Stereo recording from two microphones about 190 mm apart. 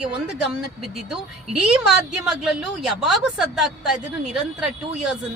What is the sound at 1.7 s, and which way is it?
A woman's voice, 5° right (ahead or behind).